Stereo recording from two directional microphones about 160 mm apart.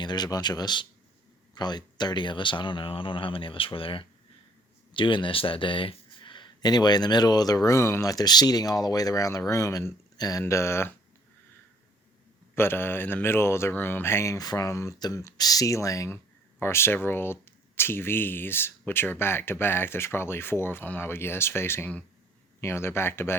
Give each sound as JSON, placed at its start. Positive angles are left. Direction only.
{"t": 0.0, "sound": "speech", "side_deg": 25}
{"t": 12.5, "sound": "speech", "side_deg": 15}